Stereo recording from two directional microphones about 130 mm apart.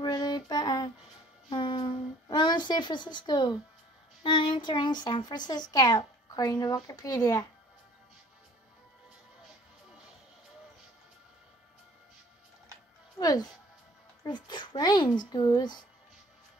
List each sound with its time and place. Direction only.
0.0 s child singing: 30° left (ahead or behind)
1.5 s a sound: 40° left (ahead or behind)
4.2 s a child's voice: 40° left (ahead or behind)
13.2 s a child's voice: 30° left (ahead or behind)